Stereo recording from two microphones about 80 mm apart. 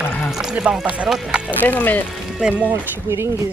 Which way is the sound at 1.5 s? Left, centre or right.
Left.